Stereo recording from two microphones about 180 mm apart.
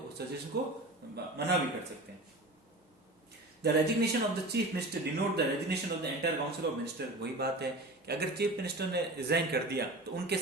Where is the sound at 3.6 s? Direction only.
65° right (ahead or behind).